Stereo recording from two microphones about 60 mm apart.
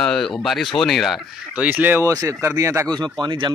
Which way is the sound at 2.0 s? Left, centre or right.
Right.